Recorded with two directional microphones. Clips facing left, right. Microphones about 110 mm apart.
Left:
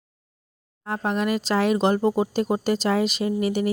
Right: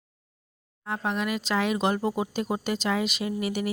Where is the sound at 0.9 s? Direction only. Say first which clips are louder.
Left 4 dB; 40° left (ahead or behind).